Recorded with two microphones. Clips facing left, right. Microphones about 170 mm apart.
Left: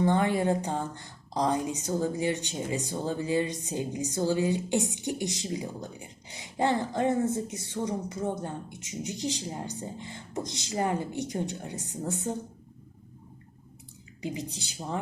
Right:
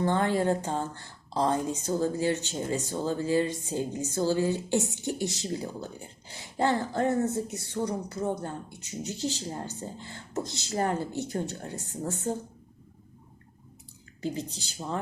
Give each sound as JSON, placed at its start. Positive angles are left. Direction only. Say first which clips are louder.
{"t": 0.0, "sound": "a woman's voice", "louder": "left 1 dB", "side_deg": 15}
{"t": 14.2, "sound": "a woman's voice", "louder": "right 2 dB", "side_deg": 15}